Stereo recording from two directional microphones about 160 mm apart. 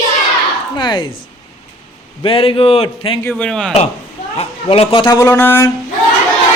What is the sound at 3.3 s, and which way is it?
Speech, 5° left (ahead or behind).